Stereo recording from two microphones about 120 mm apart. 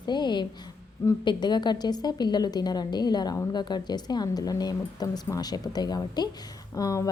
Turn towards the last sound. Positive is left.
turn(degrees=30)  # may be behind; listen again after turning